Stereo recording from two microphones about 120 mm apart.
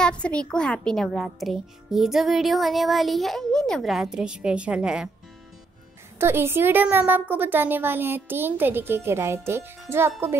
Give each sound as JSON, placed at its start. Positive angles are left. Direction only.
{"t": 0.0, "sound": "a child's voice", "side_deg": 10}
{"t": 6.1, "sound": "a woman's voice", "side_deg": -20}